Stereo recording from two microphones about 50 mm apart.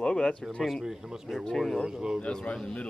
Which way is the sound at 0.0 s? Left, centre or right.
Centre.